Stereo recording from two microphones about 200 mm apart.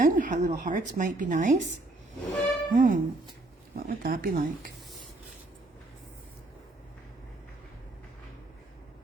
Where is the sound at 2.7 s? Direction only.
40° right (ahead or behind).